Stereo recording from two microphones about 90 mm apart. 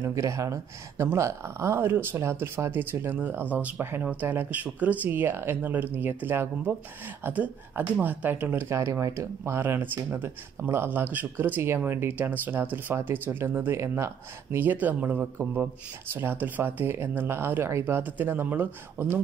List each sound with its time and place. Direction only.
0.0 s speech: 35° right (ahead or behind)